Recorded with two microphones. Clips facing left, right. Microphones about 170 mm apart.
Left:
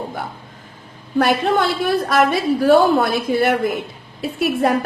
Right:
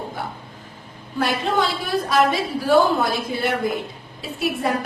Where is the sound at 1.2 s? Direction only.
60° left (ahead or behind).